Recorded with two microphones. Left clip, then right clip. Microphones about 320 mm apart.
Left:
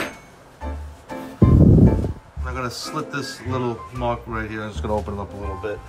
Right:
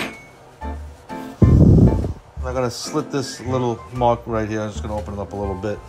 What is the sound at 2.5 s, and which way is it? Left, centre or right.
A man's voice, centre.